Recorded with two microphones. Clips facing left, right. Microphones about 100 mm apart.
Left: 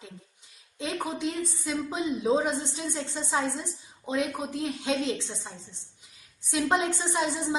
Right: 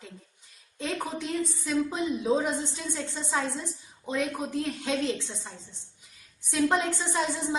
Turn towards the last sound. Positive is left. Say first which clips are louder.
# left 1 dB
turn(degrees=20)  # may be behind; listen again after turning